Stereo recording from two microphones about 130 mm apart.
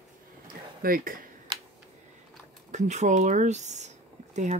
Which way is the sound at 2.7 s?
65° right (ahead or behind).